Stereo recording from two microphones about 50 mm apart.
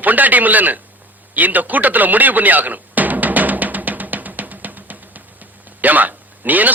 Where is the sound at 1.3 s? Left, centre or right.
Right.